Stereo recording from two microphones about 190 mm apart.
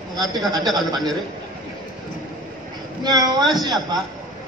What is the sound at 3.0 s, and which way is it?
Speech, 20° right (ahead or behind).